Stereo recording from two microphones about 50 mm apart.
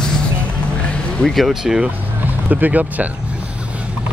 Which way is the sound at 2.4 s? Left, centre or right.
Right.